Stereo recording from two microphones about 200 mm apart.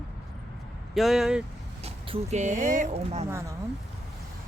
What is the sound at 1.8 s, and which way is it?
Speech, 30° right (ahead or behind).